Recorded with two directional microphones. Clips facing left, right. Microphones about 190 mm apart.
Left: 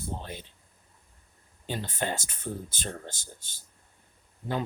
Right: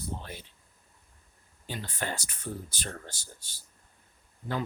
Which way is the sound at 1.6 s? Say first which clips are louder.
Left 4 dB; 20° left (ahead or behind).